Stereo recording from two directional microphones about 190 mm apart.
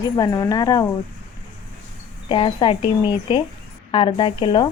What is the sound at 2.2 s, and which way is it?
A woman's voice, 25° left (ahead or behind).